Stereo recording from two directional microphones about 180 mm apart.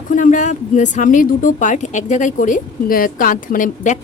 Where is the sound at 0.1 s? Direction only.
45° left (ahead or behind).